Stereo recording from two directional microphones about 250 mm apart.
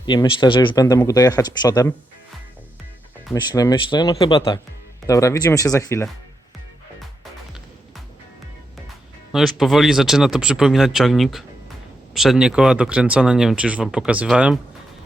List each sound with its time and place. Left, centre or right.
0.0 s speech: centre
3.3 s speech: centre
9.3 s speech: centre